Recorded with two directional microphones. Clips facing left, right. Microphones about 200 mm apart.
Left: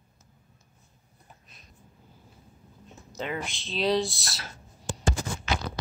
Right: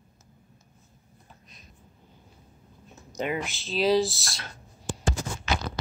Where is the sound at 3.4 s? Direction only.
Centre (ahead or behind).